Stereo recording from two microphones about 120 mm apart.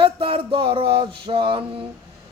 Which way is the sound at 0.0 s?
50° right (ahead or behind).